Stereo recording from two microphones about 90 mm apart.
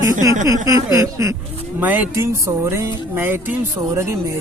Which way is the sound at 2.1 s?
30° right (ahead or behind).